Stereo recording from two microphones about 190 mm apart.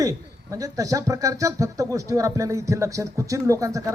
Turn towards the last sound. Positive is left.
turn(degrees=-15)  # may be behind; listen again after turning